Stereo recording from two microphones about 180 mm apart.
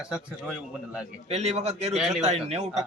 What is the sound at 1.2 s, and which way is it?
Speech, 40° right (ahead or behind).